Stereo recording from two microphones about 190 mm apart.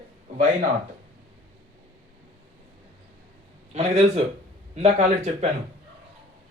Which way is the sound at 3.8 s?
35° right (ahead or behind).